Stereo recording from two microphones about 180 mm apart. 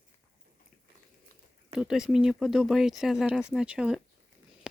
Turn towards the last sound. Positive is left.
turn(degrees=-5)  # may be behind; listen again after turning